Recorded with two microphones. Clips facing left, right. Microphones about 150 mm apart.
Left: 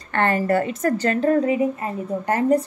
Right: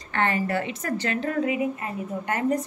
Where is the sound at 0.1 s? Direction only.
50° left (ahead or behind).